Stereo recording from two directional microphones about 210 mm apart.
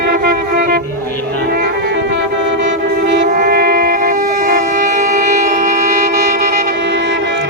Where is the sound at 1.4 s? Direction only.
45° right (ahead or behind).